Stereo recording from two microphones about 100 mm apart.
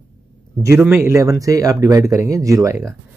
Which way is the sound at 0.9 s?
25° right (ahead or behind).